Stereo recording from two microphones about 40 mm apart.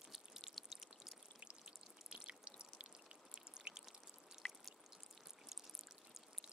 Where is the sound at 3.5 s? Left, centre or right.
Right.